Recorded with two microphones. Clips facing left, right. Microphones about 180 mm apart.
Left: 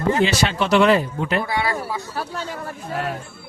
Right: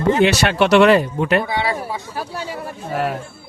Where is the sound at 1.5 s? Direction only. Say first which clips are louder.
Right 2 dB; 20° right (ahead or behind).